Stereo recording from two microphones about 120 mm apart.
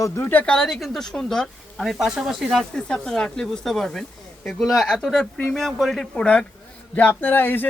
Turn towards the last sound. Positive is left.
turn(degrees=15)  # may be behind; listen again after turning